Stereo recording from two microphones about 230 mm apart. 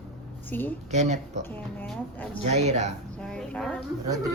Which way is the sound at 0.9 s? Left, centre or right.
Right.